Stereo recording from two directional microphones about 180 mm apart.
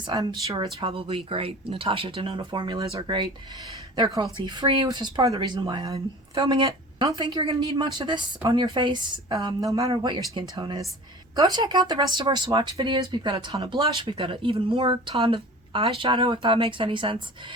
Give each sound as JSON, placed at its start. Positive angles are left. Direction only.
{"t": 0.1, "sound": "speech", "side_deg": -20}
{"t": 6.3, "sound": "speech", "side_deg": -30}